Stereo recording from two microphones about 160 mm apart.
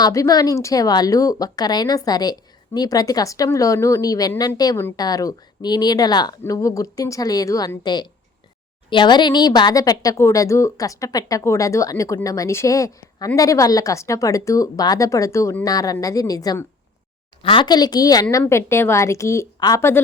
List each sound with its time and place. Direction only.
0.0 s speech: 20° left (ahead or behind)
17.4 s speech: 30° left (ahead or behind)